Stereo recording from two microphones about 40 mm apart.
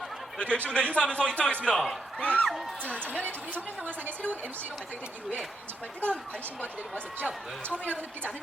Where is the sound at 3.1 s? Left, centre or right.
Right.